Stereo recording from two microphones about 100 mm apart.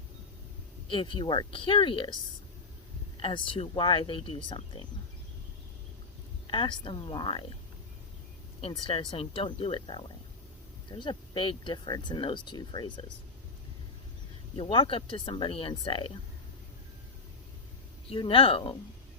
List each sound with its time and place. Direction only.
0.9 s speech: 60° left (ahead or behind)
3.2 s speech: 60° left (ahead or behind)
6.5 s speech: 60° left (ahead or behind)
8.9 s speech: 60° left (ahead or behind)
14.5 s speech: 65° left (ahead or behind)
18.1 s speech: 65° left (ahead or behind)